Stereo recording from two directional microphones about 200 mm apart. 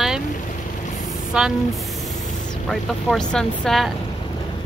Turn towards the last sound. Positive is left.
turn(degrees=0)  # may be behind; listen again after turning